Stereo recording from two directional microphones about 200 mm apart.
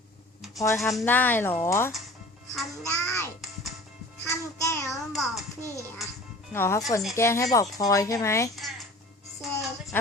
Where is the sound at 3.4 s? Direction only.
Centre (ahead or behind).